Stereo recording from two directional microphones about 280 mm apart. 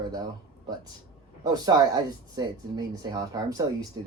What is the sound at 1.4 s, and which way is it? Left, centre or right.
Speech, centre.